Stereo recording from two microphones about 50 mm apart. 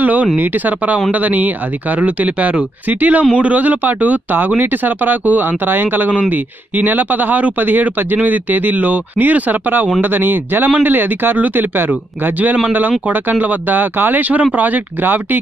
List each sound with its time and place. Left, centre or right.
0.0 s speech: right